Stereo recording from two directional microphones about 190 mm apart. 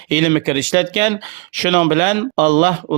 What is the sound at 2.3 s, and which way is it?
Speech, 40° right (ahead or behind).